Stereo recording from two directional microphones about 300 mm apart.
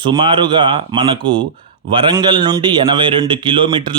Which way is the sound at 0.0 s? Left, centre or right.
Centre.